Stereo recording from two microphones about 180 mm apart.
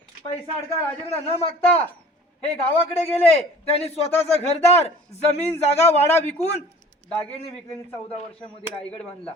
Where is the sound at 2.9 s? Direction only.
35° left (ahead or behind).